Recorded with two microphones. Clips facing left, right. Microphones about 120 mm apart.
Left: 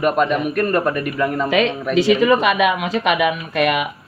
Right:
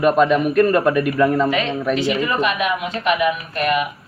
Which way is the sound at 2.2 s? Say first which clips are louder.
Left 5 dB; 90° left.